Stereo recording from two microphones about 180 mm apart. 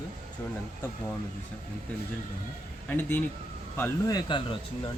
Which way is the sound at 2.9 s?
10° left (ahead or behind).